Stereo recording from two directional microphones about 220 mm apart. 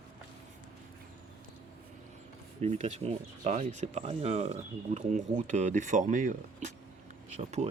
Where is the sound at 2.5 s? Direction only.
30° right (ahead or behind).